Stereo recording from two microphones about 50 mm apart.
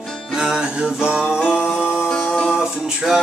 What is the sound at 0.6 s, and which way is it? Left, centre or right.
Music, right.